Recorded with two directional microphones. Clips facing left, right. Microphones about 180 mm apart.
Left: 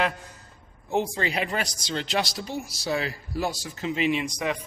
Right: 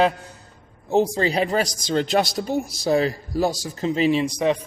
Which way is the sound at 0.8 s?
40° right (ahead or behind).